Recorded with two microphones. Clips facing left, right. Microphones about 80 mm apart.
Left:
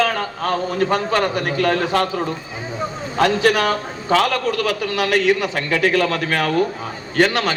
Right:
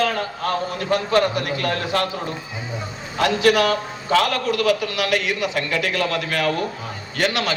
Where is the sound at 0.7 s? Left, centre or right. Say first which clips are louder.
Even; left.